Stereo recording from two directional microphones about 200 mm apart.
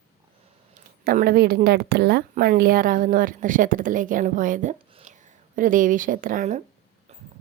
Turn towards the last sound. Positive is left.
turn(degrees=-40)  # may be behind; listen again after turning